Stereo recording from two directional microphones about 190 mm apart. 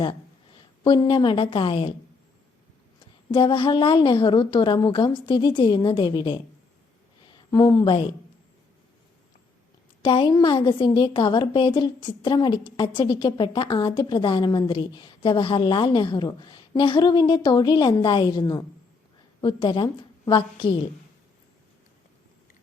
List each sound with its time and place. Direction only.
0.9 s a woman's voice: 25° left (ahead or behind)
3.3 s a woman's voice: 25° left (ahead or behind)
7.5 s a woman's voice: 20° left (ahead or behind)
10.0 s a woman's voice: 25° left (ahead or behind)